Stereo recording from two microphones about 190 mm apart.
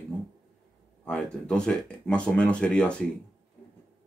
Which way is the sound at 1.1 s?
5° left (ahead or behind).